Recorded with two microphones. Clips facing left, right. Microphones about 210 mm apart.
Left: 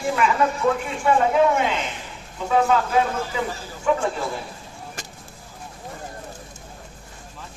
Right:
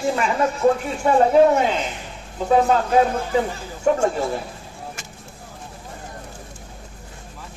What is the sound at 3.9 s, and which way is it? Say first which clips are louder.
Speech: right 3 dB; 45° right (ahead or behind).